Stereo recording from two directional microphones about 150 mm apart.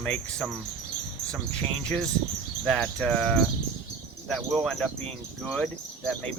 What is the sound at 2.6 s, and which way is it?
Speech, 5° left (ahead or behind).